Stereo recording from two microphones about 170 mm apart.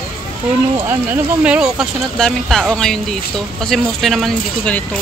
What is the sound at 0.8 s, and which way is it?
Speech, 15° right (ahead or behind).